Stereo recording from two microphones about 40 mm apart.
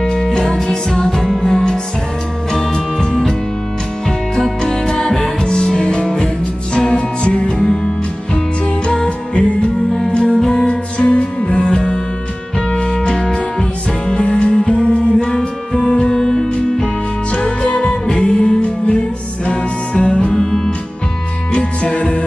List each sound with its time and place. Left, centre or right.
0.0 s music: centre
1.1 s music: centre
4.4 s music: centre
10.7 s music: left
20.3 s music: centre
21.5 s music: left